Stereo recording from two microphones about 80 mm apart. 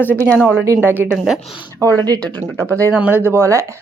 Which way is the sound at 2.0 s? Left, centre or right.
Right.